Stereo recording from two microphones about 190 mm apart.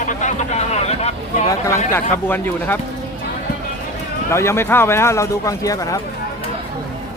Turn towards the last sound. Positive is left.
turn(degrees=20)  # may be behind; listen again after turning